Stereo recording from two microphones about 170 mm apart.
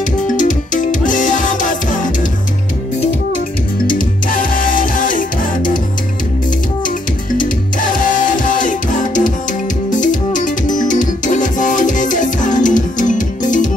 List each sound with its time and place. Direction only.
0.4 s music: 50° left (ahead or behind)
3.8 s music: 55° left (ahead or behind)
7.3 s music: 50° left (ahead or behind)